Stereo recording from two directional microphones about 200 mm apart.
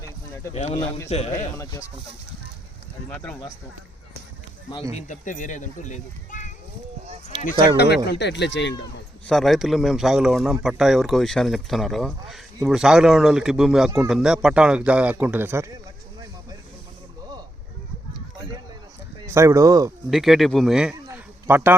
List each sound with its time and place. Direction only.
0.5 s speech: 30° left (ahead or behind)
1.5 s speech: 15° left (ahead or behind)
3.1 s speech: 5° left (ahead or behind)
4.9 s speech: 40° left (ahead or behind)
7.5 s speech: 25° right (ahead or behind)
7.8 s speech: 55° left (ahead or behind)
9.2 s speech: centre (ahead or behind)
19.2 s speech: 15° right (ahead or behind)
20.1 s a man's voice: centre (ahead or behind)